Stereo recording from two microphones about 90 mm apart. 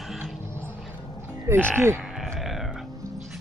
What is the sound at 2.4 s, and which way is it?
Music, centre (ahead or behind).